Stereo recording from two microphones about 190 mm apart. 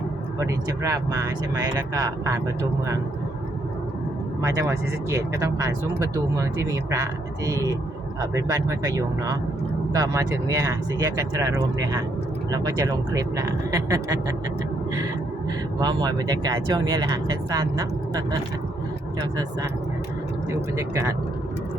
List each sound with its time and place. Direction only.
0.3 s speech: 15° right (ahead or behind)
4.4 s speech: 15° right (ahead or behind)
15.8 s speech: 20° right (ahead or behind)
20.5 s speech: 15° right (ahead or behind)